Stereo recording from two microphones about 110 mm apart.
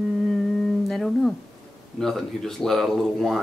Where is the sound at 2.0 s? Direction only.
5° left (ahead or behind).